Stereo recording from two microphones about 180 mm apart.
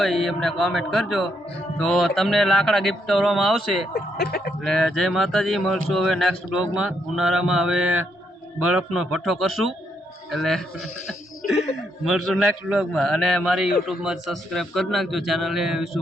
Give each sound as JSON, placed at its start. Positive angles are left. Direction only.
{"t": 0.0, "sound": "speech", "side_deg": 0}
{"t": 3.9, "sound": "speech", "side_deg": 60}
{"t": 4.6, "sound": "speech", "side_deg": 0}
{"t": 11.4, "sound": "a sound", "side_deg": 45}
{"t": 12.0, "sound": "speech", "side_deg": 0}